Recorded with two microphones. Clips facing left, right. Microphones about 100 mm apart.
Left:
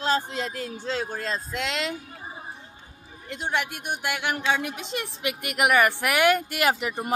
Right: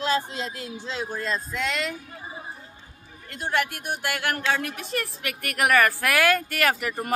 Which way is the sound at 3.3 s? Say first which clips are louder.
Right 2 dB; 15° left (ahead or behind).